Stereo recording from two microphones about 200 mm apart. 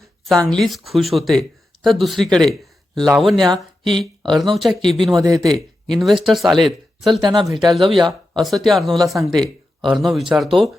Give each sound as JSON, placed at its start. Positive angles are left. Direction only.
{"t": 0.3, "sound": "speech", "side_deg": 0}
{"t": 3.8, "sound": "speech", "side_deg": -25}
{"t": 4.5, "sound": "speech", "side_deg": 0}
{"t": 5.2, "sound": "speech", "side_deg": -15}
{"t": 5.5, "sound": "speech", "side_deg": 0}
{"t": 7.3, "sound": "speech", "side_deg": -20}
{"t": 7.7, "sound": "speech", "side_deg": 0}
{"t": 7.9, "sound": "speech", "side_deg": -20}
{"t": 8.4, "sound": "speech", "side_deg": 0}